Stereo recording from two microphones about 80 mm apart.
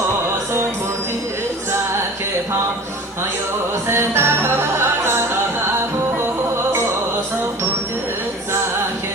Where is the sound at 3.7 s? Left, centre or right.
Right.